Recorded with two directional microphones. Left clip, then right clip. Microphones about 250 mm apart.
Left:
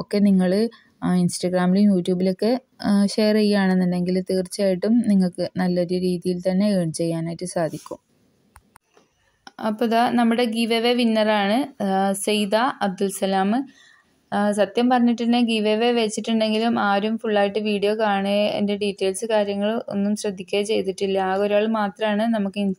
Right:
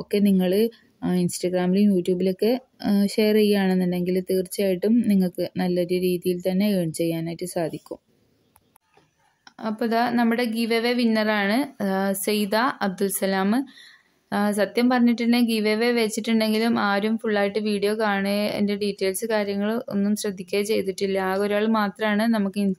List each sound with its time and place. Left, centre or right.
0.3 s speech: centre
9.6 s a woman's voice: centre